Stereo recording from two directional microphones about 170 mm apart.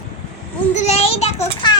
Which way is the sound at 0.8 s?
40° left (ahead or behind).